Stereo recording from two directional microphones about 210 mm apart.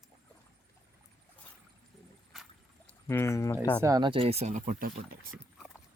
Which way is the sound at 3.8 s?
20° right (ahead or behind).